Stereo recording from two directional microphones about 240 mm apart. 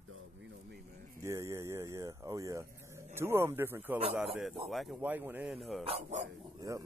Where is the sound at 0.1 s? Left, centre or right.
Right.